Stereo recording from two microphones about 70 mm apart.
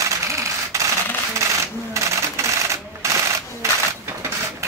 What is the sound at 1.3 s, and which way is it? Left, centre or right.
Sewing machine, right.